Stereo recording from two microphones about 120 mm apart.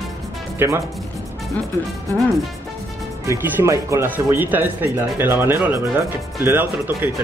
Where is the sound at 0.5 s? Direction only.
20° right (ahead or behind).